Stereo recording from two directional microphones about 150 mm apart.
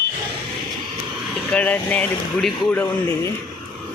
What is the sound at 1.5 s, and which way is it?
Speech, 10° left (ahead or behind).